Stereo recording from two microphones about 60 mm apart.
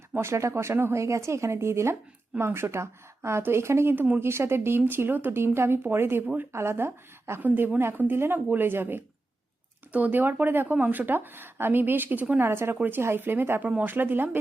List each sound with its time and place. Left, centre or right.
0.2 s speech: right
3.9 s speech: right
4.2 s speech: right
12.4 s speech: right
13.6 s speech: right
13.9 s speech: right